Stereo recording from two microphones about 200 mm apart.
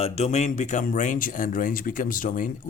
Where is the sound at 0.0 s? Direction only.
35° left (ahead or behind).